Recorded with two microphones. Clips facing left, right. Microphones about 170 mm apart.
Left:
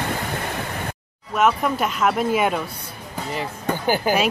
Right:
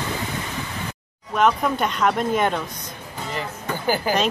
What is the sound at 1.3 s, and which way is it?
Speech, 5° left (ahead or behind).